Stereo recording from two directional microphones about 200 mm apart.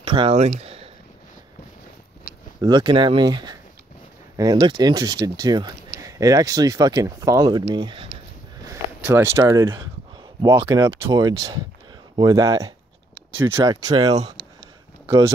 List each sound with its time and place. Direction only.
0.0 s speech: 25° right (ahead or behind)
2.6 s speech: 20° right (ahead or behind)
8.6 s speech: 10° right (ahead or behind)